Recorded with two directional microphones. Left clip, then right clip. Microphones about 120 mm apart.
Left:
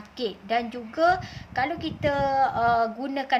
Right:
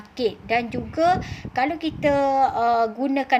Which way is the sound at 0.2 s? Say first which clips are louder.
Right 4 dB; 35° right (ahead or behind).